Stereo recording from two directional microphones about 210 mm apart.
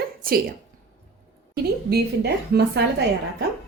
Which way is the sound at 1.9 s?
50° right (ahead or behind).